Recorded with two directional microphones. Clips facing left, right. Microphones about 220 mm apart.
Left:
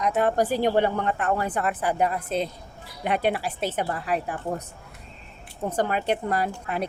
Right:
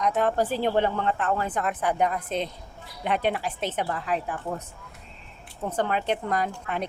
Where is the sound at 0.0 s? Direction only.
10° left (ahead or behind).